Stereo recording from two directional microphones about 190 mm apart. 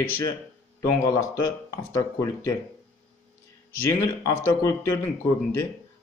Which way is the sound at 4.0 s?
15° left (ahead or behind).